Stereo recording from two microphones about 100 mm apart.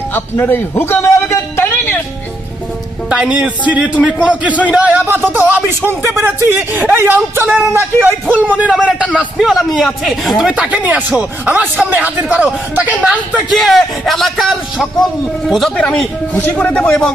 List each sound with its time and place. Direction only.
0.1 s a sound: 20° left (ahead or behind)
3.1 s speech: 10° right (ahead or behind); by 8.0 s 25° right (ahead or behind)
8.5 s speech: 10° right (ahead or behind)
9.4 s speech: centre (ahead or behind)
13.5 s a man's voice: centre (ahead or behind)